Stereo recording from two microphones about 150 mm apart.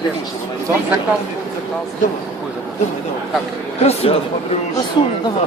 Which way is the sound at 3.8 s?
40° left (ahead or behind).